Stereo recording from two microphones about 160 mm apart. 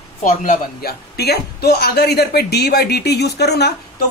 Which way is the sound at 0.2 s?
55° left (ahead or behind).